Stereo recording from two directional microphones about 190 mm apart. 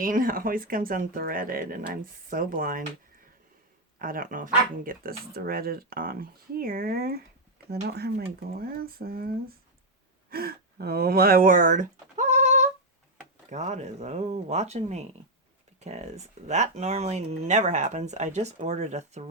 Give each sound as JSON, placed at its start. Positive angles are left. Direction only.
{"t": 0.0, "sound": "speech", "side_deg": -45}
{"t": 3.9, "sound": "speech", "side_deg": -45}